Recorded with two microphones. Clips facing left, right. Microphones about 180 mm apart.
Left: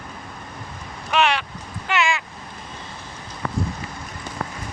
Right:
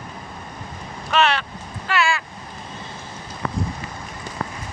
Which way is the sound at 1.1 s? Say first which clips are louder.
Right 1 dB; 10° left (ahead or behind).